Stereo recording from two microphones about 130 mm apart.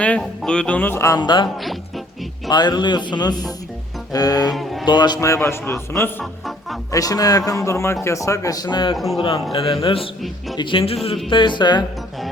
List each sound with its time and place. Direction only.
0.2 s music: 5° left (ahead or behind); by 1.2 s 20° left (ahead or behind)
1.2 s speech: 35° left (ahead or behind)
2.5 s speech: 35° left (ahead or behind)
4.5 s music: centre (ahead or behind)
4.9 s a man's voice: 35° left (ahead or behind)
9.0 s a man's voice: centre (ahead or behind)
9.2 s a man's voice: 45° left (ahead or behind)